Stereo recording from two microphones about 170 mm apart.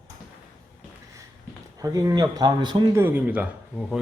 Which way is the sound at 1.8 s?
20° right (ahead or behind).